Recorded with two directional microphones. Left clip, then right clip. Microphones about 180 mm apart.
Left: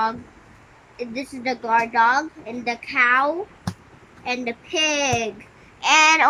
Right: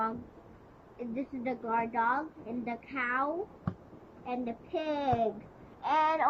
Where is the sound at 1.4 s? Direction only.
15° left (ahead or behind).